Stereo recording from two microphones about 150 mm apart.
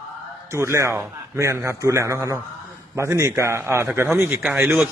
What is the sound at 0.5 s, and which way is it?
A man's voice, 20° right (ahead or behind).